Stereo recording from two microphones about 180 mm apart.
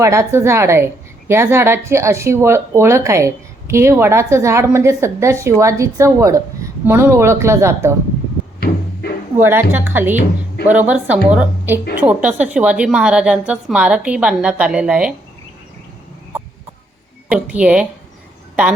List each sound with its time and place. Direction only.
0.0 s speech: 15° right (ahead or behind)
8.6 s cupboard open or close: 60° left (ahead or behind)
9.5 s a woman's voice: 10° right (ahead or behind)
17.2 s speech: 5° right (ahead or behind)